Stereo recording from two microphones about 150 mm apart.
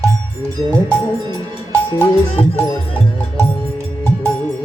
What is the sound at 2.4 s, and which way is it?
Music, 40° left (ahead or behind).